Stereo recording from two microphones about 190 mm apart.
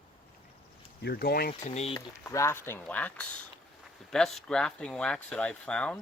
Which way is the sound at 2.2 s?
15° left (ahead or behind).